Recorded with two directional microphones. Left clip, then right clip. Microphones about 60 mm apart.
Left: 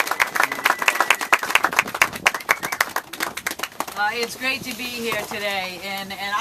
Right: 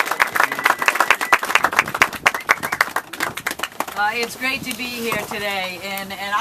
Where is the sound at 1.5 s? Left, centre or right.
Left.